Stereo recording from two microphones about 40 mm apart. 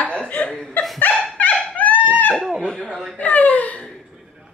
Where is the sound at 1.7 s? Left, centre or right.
Left.